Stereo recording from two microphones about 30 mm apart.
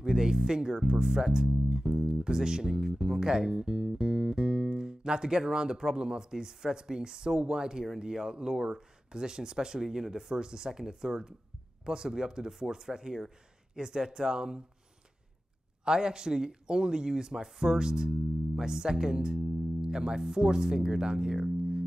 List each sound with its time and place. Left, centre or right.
0.0 s music: right
0.5 s speech: right
12.4 s speech: centre
12.7 s speech: right
15.8 s speech: right